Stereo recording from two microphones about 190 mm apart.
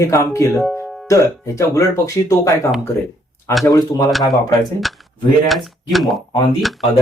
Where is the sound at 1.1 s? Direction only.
15° left (ahead or behind).